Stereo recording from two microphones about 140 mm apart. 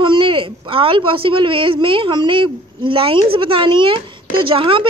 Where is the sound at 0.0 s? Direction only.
35° right (ahead or behind).